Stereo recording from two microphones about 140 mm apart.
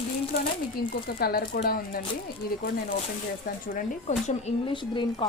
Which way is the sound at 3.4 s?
70° left (ahead or behind).